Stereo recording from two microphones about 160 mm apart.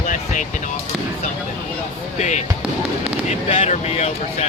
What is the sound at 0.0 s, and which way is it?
Basketball bounce, 55° left (ahead or behind).